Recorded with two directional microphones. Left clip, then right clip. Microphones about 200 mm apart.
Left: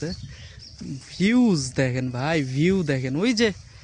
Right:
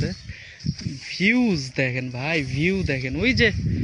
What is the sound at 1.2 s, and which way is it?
Speech, 20° left (ahead or behind).